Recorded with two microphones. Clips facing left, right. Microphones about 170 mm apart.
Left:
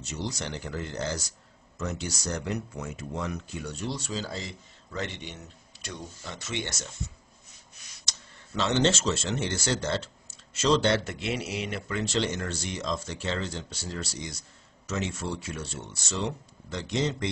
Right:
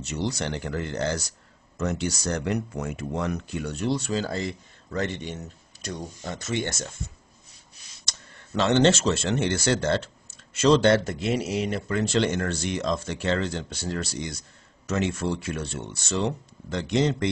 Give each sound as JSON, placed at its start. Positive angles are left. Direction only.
{"t": 0.0, "sound": "speech", "side_deg": -65}
{"t": 8.1, "sound": "speech", "side_deg": -55}
{"t": 11.1, "sound": "speech", "side_deg": -40}